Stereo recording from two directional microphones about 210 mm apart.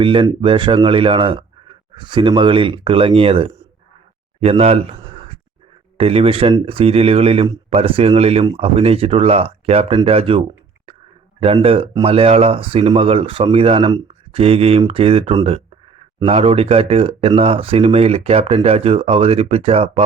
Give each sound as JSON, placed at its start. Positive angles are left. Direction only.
{"t": 0.0, "sound": "speech", "side_deg": -25}
{"t": 6.0, "sound": "speech", "side_deg": -30}